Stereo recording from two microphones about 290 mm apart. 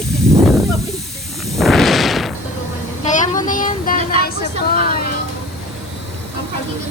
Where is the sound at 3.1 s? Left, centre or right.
Left.